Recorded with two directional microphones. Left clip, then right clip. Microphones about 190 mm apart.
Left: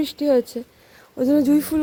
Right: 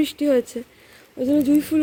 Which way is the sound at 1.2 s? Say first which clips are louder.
Left 2 dB; 20° left (ahead or behind).